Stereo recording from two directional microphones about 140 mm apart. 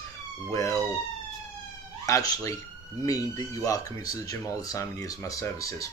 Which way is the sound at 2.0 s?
25° left (ahead or behind).